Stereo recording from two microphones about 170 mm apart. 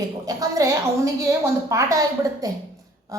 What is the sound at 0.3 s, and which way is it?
A woman's voice, 20° right (ahead or behind).